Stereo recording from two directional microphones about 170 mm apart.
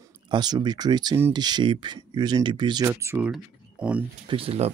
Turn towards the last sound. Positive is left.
turn(degrees=-35)  # may be behind; listen again after turning